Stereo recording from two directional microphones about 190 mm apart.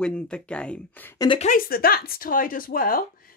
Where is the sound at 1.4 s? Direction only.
45° left (ahead or behind).